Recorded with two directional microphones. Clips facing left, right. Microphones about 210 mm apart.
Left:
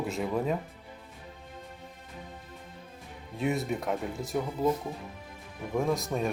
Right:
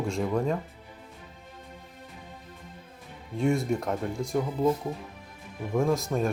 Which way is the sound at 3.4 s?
5° left (ahead or behind).